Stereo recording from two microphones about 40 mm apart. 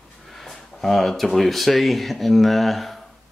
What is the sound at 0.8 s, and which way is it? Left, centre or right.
Speech, centre.